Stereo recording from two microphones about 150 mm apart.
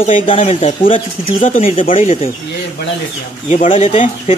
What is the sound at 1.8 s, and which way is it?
Speech, 65° left (ahead or behind).